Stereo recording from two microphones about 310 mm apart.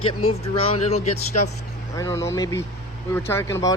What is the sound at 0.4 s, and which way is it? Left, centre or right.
Speech, centre.